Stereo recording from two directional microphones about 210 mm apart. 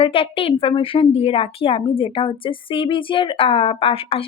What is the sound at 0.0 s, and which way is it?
A woman's voice, 25° left (ahead or behind).